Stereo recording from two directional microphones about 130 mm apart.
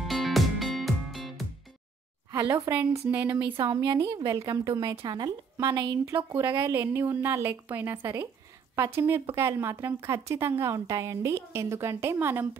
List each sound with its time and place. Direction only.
0.0 s music: centre (ahead or behind)
2.5 s a woman's voice: 15° right (ahead or behind)
4.0 s a woman's voice: 25° right (ahead or behind)
6.1 s a woman's voice: 20° right (ahead or behind)